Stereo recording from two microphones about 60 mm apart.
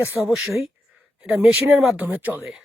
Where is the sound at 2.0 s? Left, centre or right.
Right.